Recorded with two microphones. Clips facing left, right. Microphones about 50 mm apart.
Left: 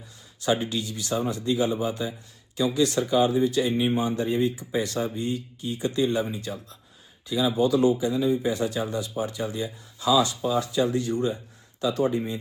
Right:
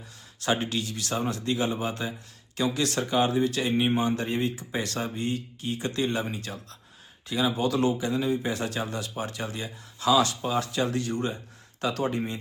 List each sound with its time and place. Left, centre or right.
0.3 s speech: right